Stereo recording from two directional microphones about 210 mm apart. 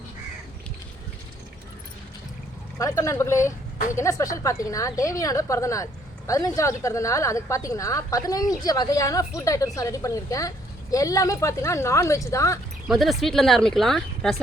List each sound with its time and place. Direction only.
2.7 s a woman's voice: 15° left (ahead or behind)
12.9 s speech: centre (ahead or behind)